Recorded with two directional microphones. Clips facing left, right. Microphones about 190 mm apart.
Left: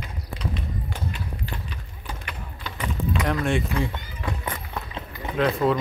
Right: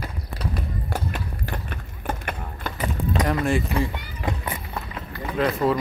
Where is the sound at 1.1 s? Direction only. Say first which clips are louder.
Right 3 dB; 55° right (ahead or behind).